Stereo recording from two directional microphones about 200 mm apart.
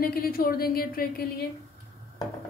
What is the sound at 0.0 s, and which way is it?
A woman's voice, 50° left (ahead or behind).